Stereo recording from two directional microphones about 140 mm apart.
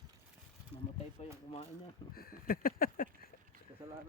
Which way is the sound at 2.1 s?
90° left.